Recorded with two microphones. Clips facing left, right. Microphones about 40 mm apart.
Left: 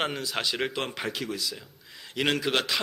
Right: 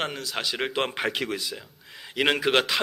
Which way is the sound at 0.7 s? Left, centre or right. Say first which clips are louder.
Right 5 dB; right.